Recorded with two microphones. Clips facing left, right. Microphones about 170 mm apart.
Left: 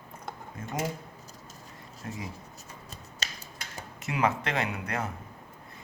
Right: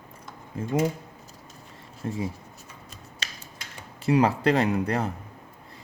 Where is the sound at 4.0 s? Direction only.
35° right (ahead or behind).